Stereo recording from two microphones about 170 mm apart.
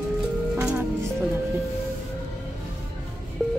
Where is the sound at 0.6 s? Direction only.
5° right (ahead or behind).